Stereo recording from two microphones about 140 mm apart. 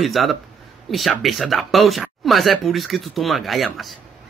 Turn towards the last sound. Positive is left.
turn(degrees=0)  # may be behind; listen again after turning